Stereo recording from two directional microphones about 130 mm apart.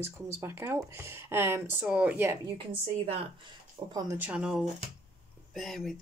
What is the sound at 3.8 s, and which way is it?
Speech, 35° right (ahead or behind).